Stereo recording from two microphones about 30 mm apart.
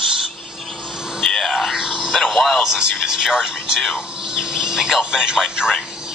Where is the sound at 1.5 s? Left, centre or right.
Centre.